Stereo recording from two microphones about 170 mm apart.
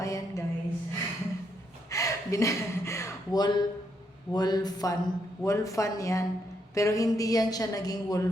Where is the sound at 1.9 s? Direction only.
20° left (ahead or behind).